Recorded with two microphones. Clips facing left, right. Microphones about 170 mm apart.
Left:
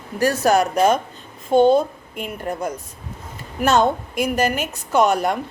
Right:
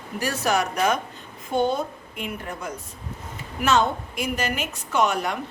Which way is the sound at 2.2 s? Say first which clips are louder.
Left 6 dB; 40° left (ahead or behind).